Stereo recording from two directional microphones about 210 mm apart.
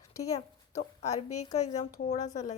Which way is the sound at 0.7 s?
30° left (ahead or behind).